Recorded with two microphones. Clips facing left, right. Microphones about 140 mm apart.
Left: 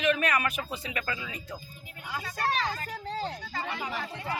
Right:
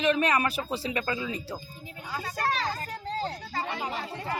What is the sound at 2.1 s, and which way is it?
Vehicle, 40° right (ahead or behind).